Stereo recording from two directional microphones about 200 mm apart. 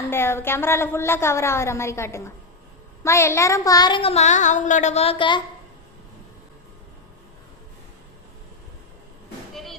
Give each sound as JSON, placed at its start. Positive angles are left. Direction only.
{"t": 0.1, "sound": "a woman's voice", "side_deg": 10}